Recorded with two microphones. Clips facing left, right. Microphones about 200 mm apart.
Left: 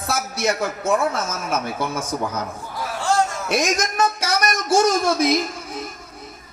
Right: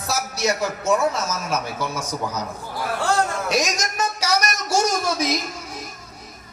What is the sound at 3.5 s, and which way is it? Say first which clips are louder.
A man's voice: left 5 dB; 55° left (ahead or behind).